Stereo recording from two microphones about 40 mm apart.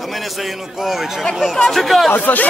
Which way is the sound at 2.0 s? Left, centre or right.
Left.